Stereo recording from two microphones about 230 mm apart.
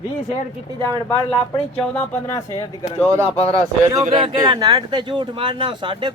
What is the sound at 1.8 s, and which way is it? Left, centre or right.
Speech, centre.